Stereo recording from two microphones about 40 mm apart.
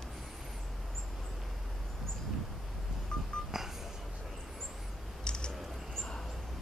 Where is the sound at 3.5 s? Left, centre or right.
Centre.